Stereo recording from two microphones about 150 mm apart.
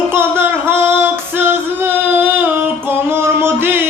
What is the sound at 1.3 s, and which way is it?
Female singing, 15° right (ahead or behind).